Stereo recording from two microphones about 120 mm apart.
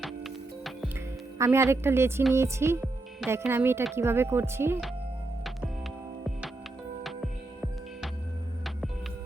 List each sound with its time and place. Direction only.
0.0 s music: centre (ahead or behind)
1.4 s a woman's voice: 25° right (ahead or behind)
7.0 s music: 5° right (ahead or behind)